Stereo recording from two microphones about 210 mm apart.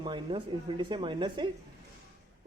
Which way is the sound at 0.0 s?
25° right (ahead or behind).